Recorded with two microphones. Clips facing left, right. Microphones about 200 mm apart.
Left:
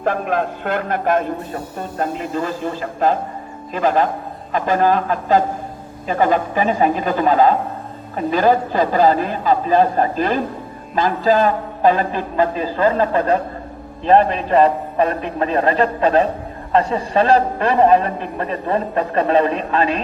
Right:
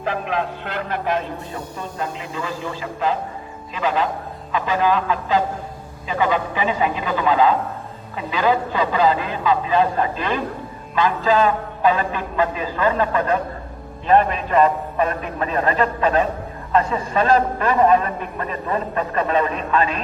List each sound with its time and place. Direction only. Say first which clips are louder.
0.0 s a man's voice: left 4 dB; 50° left (ahead or behind)